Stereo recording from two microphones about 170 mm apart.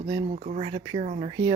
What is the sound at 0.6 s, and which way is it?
Speech, 30° right (ahead or behind).